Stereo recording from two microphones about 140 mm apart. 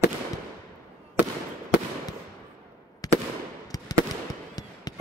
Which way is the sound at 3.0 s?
25° left (ahead or behind).